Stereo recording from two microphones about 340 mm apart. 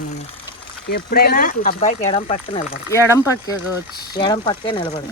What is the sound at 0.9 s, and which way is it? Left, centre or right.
Speech, left.